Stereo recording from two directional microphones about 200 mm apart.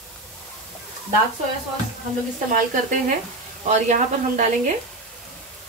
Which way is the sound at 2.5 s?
40° right (ahead or behind).